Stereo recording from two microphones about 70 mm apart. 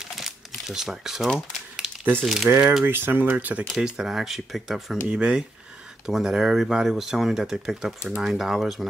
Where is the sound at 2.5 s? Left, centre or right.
Right.